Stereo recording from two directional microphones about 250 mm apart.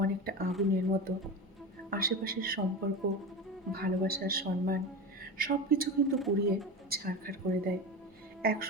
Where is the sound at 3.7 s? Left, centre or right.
Right.